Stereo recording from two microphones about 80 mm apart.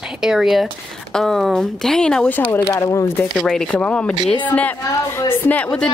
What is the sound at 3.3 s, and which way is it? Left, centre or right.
Speech, centre.